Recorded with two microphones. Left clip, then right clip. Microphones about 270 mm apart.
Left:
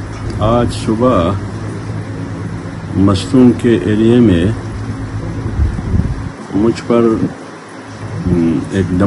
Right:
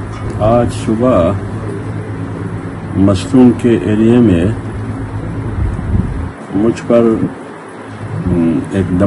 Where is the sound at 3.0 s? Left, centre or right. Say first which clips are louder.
Right 1 dB; centre.